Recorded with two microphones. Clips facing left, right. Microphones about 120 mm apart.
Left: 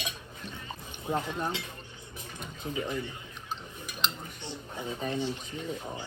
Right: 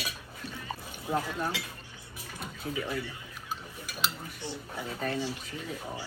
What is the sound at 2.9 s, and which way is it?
Speech, 20° left (ahead or behind).